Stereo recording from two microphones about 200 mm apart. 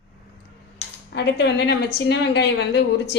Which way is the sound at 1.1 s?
60° left (ahead or behind).